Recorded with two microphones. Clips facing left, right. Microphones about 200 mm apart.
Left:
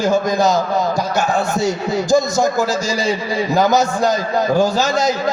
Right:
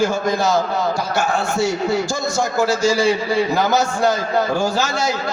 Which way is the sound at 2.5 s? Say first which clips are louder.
Right 2 dB; 20° left (ahead or behind).